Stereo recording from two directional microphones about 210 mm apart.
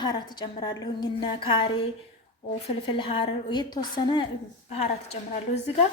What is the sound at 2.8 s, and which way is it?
A woman's voice, 25° left (ahead or behind).